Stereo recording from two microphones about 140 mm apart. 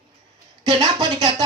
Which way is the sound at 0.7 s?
30° right (ahead or behind).